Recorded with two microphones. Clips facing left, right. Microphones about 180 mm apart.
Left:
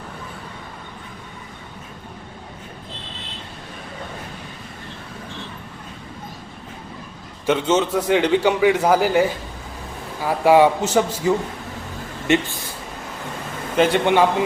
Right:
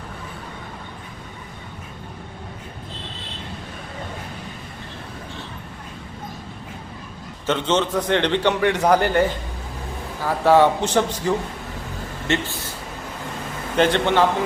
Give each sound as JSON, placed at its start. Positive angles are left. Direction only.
{"t": 7.4, "sound": "a man's voice", "side_deg": 10}
{"t": 10.2, "sound": "a man's voice", "side_deg": 10}
{"t": 13.7, "sound": "a man's voice", "side_deg": 10}